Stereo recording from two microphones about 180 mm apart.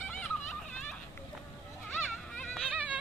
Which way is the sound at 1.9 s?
5° left (ahead or behind).